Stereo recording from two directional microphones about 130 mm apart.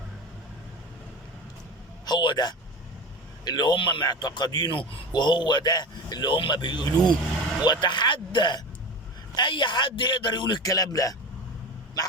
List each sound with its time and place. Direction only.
2.0 s a man's voice: 35° left (ahead or behind)